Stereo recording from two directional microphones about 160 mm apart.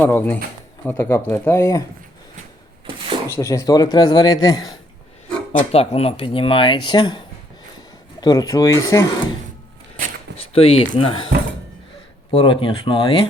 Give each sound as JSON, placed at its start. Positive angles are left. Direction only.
{"t": 0.0, "sound": "speech", "side_deg": 15}
{"t": 3.2, "sound": "speech", "side_deg": 15}
{"t": 5.5, "sound": "speech", "side_deg": 40}
{"t": 8.2, "sound": "speech", "side_deg": 25}
{"t": 10.3, "sound": "speech", "side_deg": 35}
{"t": 12.3, "sound": "speech", "side_deg": 35}